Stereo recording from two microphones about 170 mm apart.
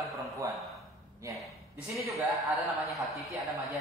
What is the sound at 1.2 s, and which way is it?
Speech, 20° right (ahead or behind).